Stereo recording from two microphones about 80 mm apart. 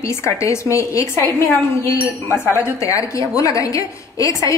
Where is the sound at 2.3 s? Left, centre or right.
Left.